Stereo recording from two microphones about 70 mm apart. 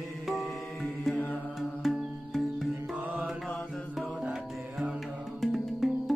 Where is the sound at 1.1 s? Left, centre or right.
Left.